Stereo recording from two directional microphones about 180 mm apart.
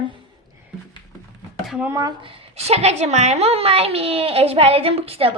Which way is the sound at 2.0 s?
25° right (ahead or behind).